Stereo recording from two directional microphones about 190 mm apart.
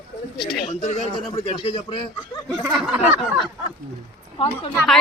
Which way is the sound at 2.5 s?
Centre (ahead or behind).